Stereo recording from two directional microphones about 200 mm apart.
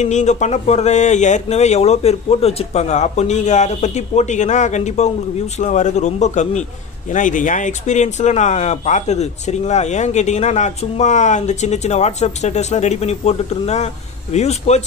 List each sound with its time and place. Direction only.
0.0 s speech: 35° left (ahead or behind)